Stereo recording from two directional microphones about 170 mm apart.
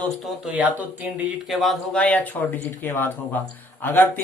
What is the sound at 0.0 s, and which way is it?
A man's voice, 5° right (ahead or behind).